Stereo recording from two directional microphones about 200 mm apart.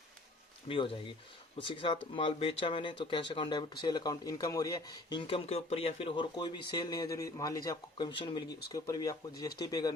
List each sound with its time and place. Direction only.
0.7 s speech: 25° left (ahead or behind)